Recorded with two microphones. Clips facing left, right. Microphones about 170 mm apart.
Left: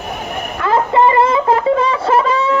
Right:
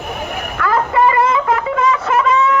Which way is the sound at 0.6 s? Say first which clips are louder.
Left 2 dB; 25° left (ahead or behind).